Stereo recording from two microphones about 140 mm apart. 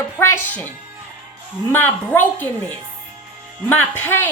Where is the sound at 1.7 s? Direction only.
15° left (ahead or behind).